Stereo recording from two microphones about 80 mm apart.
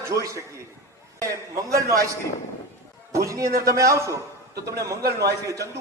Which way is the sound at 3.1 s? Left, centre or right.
Right.